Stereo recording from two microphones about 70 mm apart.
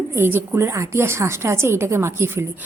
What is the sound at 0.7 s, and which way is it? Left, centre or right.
A woman's voice, right.